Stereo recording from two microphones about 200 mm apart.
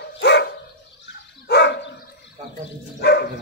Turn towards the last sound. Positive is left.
turn(degrees=55)  # may be behind; listen again after turning